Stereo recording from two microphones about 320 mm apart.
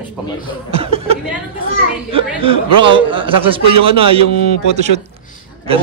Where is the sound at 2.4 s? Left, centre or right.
Centre.